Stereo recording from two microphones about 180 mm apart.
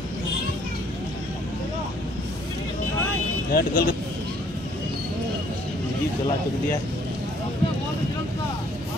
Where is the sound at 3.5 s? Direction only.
55° left (ahead or behind).